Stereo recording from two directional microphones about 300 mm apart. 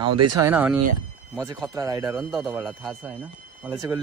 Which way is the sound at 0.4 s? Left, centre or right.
Centre.